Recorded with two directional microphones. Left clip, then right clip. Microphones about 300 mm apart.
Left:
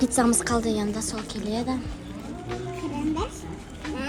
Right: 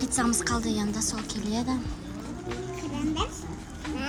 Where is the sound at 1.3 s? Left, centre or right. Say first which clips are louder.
Left 2 dB; centre.